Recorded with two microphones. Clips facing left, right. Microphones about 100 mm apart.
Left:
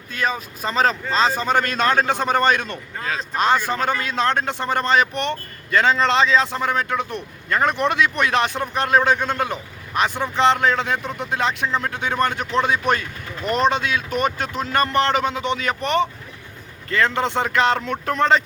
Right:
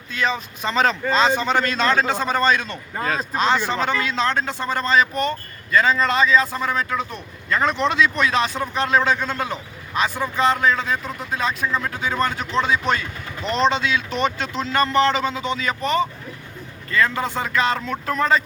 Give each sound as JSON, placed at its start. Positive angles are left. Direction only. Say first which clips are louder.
{"t": 0.1, "sound": "a man's voice", "louder": "right 1 dB", "side_deg": 45}
{"t": 3.0, "sound": "speech", "louder": "right 4 dB", "side_deg": -5}
{"t": 3.3, "sound": "a man's voice", "louder": "left 2 dB", "side_deg": 50}
{"t": 13.4, "sound": "speech", "louder": "left 1 dB", "side_deg": 10}
{"t": 13.7, "sound": "a man's voice", "louder": "even", "side_deg": 55}